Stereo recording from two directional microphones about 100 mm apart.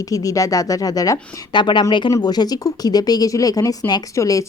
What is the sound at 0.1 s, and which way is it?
Speech, 35° left (ahead or behind).